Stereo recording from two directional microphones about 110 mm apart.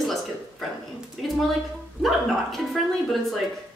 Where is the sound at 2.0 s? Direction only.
Centre (ahead or behind).